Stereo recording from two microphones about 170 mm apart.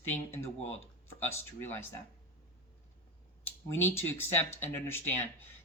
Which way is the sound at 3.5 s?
15° left (ahead or behind).